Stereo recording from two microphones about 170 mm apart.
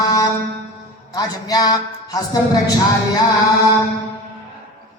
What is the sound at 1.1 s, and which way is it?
Speech, 20° left (ahead or behind).